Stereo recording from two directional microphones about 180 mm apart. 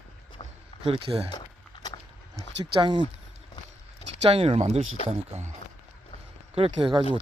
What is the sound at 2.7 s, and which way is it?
Speech, 25° right (ahead or behind).